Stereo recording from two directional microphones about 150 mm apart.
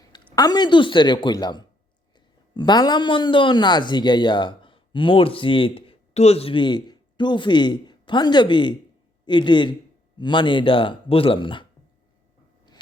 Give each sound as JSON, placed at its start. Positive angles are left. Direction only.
{"t": 0.0, "sound": "a man's voice", "side_deg": 25}